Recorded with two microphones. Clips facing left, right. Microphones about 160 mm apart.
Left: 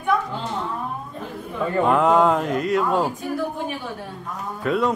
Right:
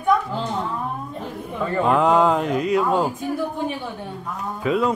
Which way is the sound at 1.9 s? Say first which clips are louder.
Even; centre (ahead or behind).